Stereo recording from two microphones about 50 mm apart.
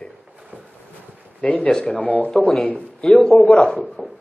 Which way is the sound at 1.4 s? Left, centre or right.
Left.